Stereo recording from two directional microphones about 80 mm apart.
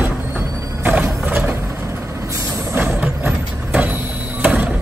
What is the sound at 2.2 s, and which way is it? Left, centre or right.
Vehicle, right.